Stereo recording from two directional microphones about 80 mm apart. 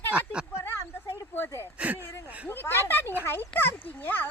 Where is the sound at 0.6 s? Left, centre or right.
Left.